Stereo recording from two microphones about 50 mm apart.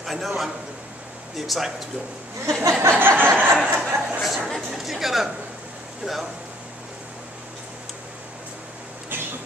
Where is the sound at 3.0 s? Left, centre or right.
Right.